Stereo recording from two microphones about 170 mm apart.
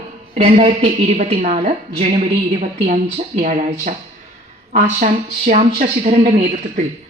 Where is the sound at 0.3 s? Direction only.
45° right (ahead or behind).